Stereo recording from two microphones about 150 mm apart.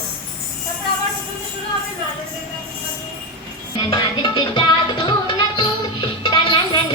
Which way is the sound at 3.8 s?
30° left (ahead or behind).